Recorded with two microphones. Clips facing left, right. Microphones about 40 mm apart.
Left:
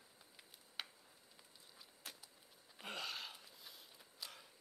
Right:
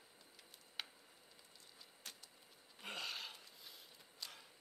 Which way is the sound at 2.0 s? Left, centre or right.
Centre.